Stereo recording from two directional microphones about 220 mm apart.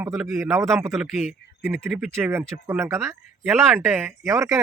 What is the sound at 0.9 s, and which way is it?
Speech, centre (ahead or behind).